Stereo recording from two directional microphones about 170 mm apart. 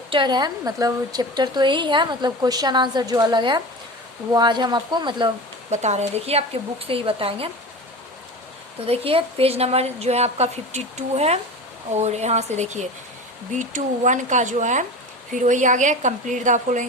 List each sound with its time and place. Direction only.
0.1 s a woman's voice: 25° right (ahead or behind)
5.7 s a woman's voice: 40° right (ahead or behind)
8.9 s a woman's voice: 35° right (ahead or behind)